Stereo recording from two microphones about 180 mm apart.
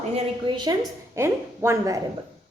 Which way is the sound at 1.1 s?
15° right (ahead or behind).